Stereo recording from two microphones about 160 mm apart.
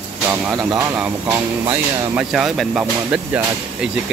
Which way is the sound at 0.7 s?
20° right (ahead or behind).